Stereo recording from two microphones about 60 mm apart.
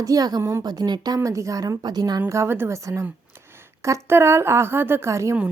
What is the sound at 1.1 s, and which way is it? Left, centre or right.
A woman's voice, right.